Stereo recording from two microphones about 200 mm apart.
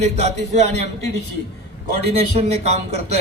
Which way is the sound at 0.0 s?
35° right (ahead or behind).